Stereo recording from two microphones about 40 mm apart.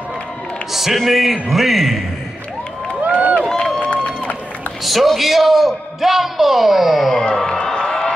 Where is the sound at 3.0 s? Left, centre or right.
Right.